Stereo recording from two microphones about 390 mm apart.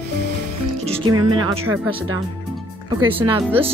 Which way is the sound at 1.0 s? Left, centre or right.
Right.